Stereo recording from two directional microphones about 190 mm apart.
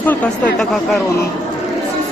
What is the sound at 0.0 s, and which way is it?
Speech, 10° left (ahead or behind).